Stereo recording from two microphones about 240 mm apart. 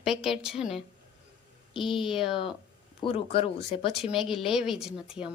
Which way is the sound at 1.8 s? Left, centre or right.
Left.